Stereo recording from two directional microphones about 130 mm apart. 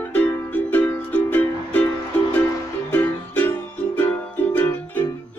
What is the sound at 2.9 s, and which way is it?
Music, 15° left (ahead or behind).